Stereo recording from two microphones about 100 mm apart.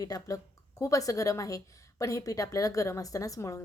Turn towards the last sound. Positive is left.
turn(degrees=35)  # may be behind; listen again after turning